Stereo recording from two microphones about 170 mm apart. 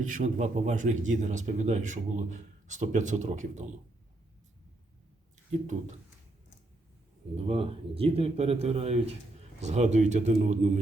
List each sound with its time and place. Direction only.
0.1 s a man's voice: 45° right (ahead or behind)
7.3 s speech: 35° right (ahead or behind)